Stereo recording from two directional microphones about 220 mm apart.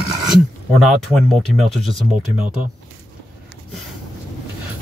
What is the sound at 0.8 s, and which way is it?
Speech, centre (ahead or behind).